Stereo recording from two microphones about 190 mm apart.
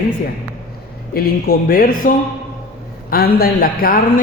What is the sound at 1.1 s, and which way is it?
A man's voice, 55° left (ahead or behind).